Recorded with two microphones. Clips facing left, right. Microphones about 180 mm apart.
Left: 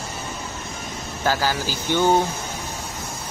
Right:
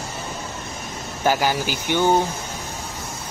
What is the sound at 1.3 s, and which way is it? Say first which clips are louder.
Speech: right 2 dB; 15° right (ahead or behind).